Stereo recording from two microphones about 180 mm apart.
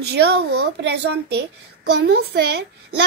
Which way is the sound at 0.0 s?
65° right (ahead or behind).